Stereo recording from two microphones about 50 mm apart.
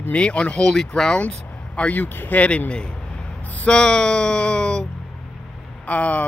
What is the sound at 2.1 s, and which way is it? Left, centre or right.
Speech, left.